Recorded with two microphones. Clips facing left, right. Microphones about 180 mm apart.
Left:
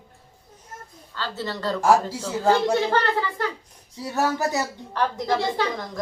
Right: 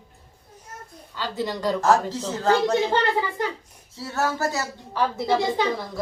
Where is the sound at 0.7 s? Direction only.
90° right.